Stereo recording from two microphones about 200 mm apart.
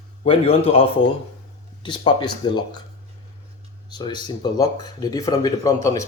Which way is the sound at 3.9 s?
20° left (ahead or behind).